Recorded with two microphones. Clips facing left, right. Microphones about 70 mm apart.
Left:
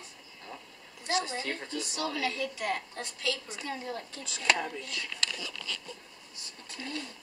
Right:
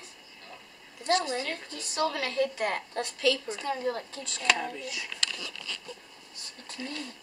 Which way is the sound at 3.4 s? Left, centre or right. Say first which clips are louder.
Right 7 dB; right.